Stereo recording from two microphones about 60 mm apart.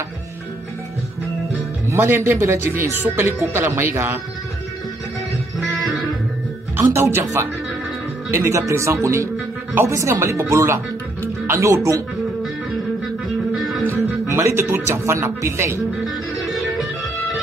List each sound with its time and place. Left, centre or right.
2.0 s speech: right
5.6 s music: centre
6.8 s speech: right
13.6 s music: centre
14.2 s speech: right
16.3 s music: centre